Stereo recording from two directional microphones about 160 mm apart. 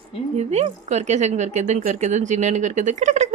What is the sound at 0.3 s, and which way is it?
Speech, 45° right (ahead or behind).